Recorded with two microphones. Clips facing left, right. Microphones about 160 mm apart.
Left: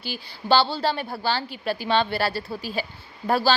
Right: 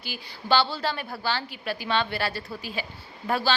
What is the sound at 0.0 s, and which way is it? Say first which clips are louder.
A woman's voice: left 4 dB; 30° left (ahead or behind).